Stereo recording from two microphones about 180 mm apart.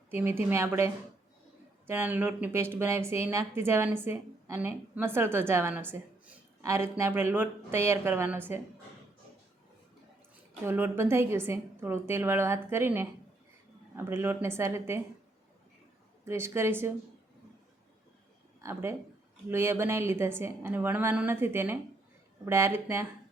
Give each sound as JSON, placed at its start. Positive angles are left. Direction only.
{"t": 0.1, "sound": "speech", "side_deg": -15}
{"t": 1.9, "sound": "speech", "side_deg": -10}
{"t": 10.7, "sound": "speech", "side_deg": -10}
{"t": 16.2, "sound": "speech", "side_deg": -15}
{"t": 18.6, "sound": "speech", "side_deg": -15}